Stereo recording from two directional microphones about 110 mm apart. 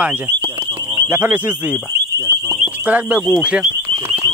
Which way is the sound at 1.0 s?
20° right (ahead or behind).